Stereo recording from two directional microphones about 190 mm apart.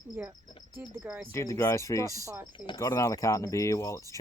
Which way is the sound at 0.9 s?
10° right (ahead or behind).